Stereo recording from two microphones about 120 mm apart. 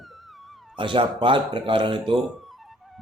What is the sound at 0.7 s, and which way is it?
Speech, 45° right (ahead or behind).